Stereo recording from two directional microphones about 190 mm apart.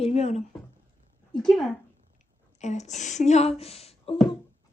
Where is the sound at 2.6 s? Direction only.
40° left (ahead or behind).